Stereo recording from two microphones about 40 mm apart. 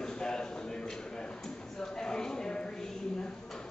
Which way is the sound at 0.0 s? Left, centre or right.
Centre.